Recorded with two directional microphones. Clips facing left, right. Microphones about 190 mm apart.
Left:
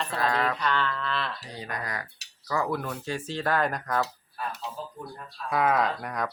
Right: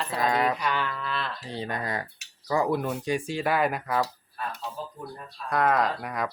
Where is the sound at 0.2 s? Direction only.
15° right (ahead or behind).